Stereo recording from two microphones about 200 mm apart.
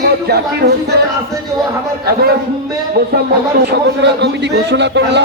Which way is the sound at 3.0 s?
50° right (ahead or behind).